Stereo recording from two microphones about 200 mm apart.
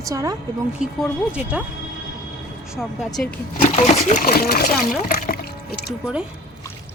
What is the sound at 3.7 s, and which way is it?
Speech, 35° left (ahead or behind).